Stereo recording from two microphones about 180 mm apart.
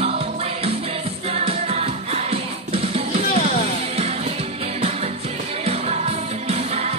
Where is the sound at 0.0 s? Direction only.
35° right (ahead or behind).